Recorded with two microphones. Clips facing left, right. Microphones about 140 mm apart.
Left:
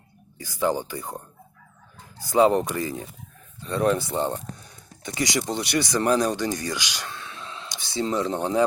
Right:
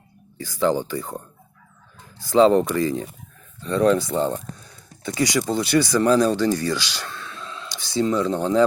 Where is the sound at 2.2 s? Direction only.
15° left (ahead or behind).